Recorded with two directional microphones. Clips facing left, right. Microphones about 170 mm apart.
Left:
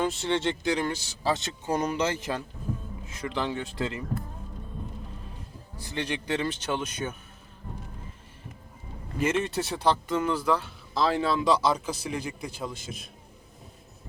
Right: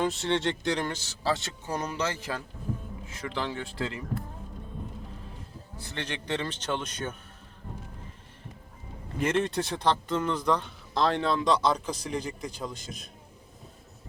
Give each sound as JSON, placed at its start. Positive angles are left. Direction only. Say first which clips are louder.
{"t": 0.0, "sound": "speech", "louder": "even", "side_deg": 0}
{"t": 5.8, "sound": "speech", "louder": "left 4 dB", "side_deg": 10}
{"t": 9.1, "sound": "speech", "louder": "even", "side_deg": 5}